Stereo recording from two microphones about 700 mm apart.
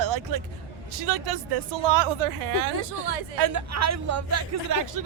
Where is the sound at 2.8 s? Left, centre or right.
Right.